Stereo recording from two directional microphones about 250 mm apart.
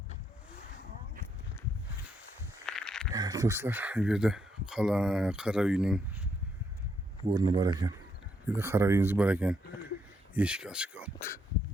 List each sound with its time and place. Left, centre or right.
2.6 s a sound: centre
3.1 s speech: centre
7.3 s speech: centre